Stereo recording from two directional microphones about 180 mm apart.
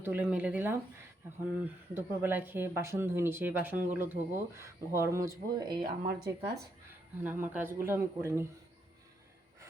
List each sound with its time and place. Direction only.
0.0 s speech: 10° right (ahead or behind)
1.9 s speech: 10° right (ahead or behind)
5.8 s speech: 65° right (ahead or behind)
7.3 s speech: 10° right (ahead or behind)